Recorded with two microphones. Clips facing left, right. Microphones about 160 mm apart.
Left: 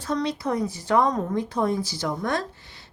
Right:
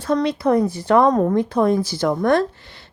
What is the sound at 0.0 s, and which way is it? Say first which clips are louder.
Speech: right 7 dB; 60° right (ahead or behind).